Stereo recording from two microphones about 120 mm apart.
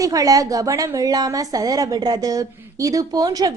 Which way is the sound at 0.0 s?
30° right (ahead or behind).